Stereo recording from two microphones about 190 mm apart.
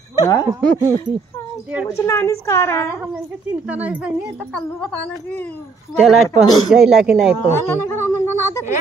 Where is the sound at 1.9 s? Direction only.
15° left (ahead or behind).